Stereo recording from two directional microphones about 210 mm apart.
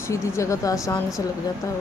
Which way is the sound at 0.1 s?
15° left (ahead or behind).